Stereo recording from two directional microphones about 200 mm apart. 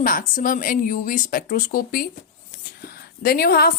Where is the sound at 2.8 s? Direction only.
50° left (ahead or behind).